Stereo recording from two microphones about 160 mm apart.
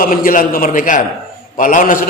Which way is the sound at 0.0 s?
60° left (ahead or behind).